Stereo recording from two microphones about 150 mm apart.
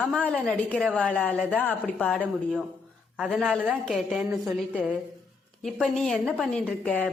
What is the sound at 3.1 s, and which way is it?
A woman's voice, 5° right (ahead or behind).